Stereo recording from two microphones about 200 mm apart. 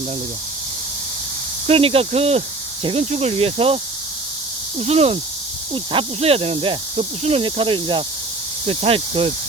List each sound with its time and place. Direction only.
1.6 s speech: 30° right (ahead or behind)
4.8 s speech: 30° right (ahead or behind)